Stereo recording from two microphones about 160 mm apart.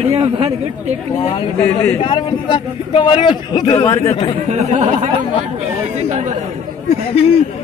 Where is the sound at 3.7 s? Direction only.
15° left (ahead or behind).